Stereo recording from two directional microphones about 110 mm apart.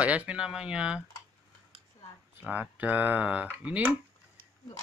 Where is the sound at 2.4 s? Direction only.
15° right (ahead or behind).